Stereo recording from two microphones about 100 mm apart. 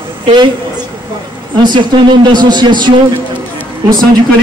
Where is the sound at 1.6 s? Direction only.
50° right (ahead or behind).